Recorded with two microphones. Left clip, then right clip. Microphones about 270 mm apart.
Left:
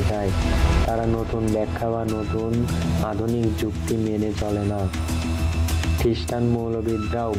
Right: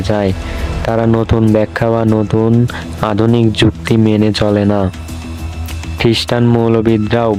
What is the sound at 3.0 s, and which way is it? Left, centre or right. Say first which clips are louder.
Speech: right 14 dB; right.